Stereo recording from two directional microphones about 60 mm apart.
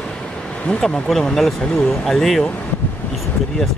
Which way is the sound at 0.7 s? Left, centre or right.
Centre.